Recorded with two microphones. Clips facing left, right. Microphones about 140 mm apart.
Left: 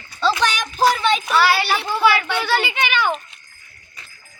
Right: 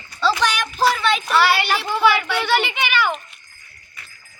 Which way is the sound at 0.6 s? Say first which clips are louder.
Left 1 dB; centre (ahead or behind).